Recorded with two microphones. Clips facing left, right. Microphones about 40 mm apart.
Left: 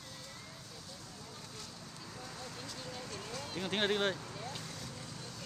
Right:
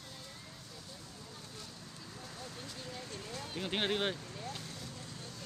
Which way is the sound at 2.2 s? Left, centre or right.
Centre.